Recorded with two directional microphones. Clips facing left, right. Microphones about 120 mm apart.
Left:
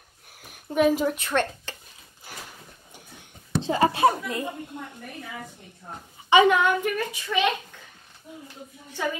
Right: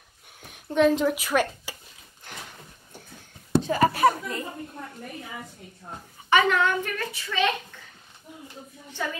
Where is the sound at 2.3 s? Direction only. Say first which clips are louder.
Even; 5° left (ahead or behind).